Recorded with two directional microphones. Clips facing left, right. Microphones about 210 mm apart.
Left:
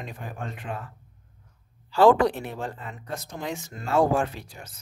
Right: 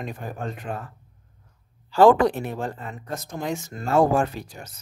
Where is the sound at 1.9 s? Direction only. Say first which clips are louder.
Right 2 dB; 50° right (ahead or behind).